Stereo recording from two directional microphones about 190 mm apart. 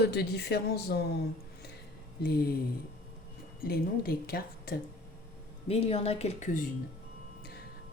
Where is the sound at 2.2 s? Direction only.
50° left (ahead or behind).